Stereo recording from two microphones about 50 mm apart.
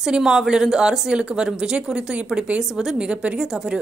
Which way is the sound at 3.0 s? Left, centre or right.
Centre.